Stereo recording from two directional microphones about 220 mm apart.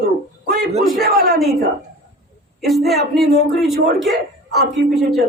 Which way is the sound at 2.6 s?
Centre (ahead or behind).